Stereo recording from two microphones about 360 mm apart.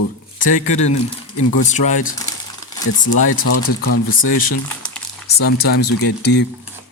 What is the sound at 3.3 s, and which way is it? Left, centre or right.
Speech, left.